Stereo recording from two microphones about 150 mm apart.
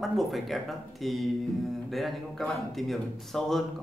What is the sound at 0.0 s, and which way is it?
A man's voice, centre (ahead or behind).